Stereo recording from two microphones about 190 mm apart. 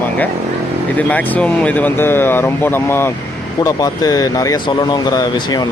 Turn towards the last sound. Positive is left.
turn(degrees=20)  # may be behind; listen again after turning